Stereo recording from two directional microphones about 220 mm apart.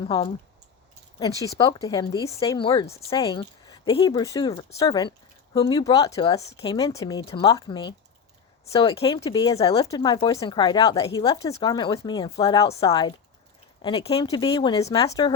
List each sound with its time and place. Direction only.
0.0 s speech: 25° left (ahead or behind)